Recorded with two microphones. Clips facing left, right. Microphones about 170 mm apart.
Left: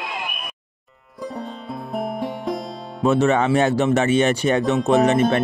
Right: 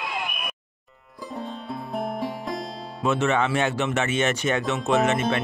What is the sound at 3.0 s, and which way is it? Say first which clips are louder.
Speech: left 5 dB; 35° left (ahead or behind).